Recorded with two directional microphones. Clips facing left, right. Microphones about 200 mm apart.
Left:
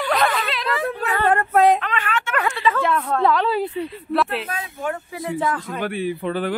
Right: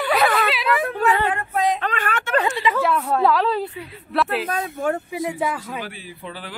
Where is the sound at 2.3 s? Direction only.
20° right (ahead or behind); by 3.5 s centre (ahead or behind).